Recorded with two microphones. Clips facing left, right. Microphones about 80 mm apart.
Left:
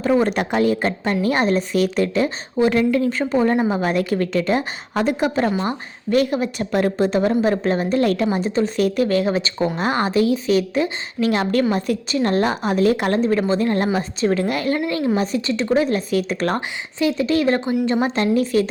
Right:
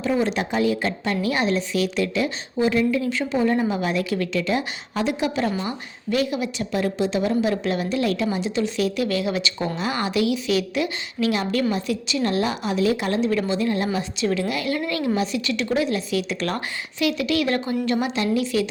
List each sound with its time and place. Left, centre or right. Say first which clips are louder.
0.0 s a woman's voice: left 4 dB; left
5.6 s a woman's voice: left 4 dB; left
16.6 s speech: left 3 dB; left
18.1 s a woman's voice: left 4 dB; left